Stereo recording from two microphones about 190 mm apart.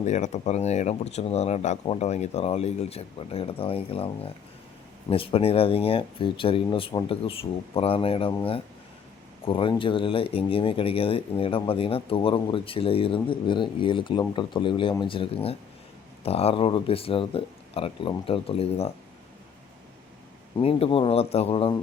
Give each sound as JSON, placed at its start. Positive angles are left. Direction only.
{"t": 0.0, "sound": "speech", "side_deg": 35}
{"t": 9.4, "sound": "speech", "side_deg": 30}
{"t": 20.6, "sound": "speech", "side_deg": 30}